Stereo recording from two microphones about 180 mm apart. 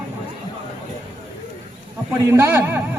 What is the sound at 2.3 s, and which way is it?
Speech, 15° right (ahead or behind).